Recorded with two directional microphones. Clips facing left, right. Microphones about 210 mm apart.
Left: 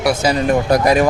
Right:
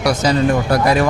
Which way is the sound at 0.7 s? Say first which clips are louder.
Left 4 dB; 20° left (ahead or behind).